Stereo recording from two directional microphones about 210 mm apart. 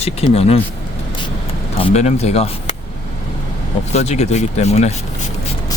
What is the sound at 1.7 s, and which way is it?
Speech, 30° left (ahead or behind).